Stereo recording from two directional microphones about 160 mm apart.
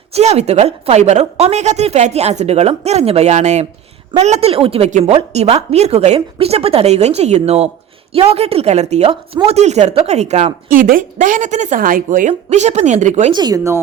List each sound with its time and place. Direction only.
0.1 s a woman's voice: 45° right (ahead or behind)
10.8 s speech: 55° right (ahead or behind)
12.3 s a woman's voice: 45° right (ahead or behind)
13.3 s speech: 25° right (ahead or behind)